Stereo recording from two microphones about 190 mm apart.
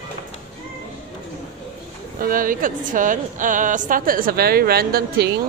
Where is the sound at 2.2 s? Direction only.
45° right (ahead or behind).